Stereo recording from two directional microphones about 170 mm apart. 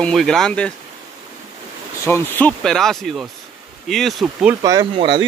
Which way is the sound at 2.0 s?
15° left (ahead or behind).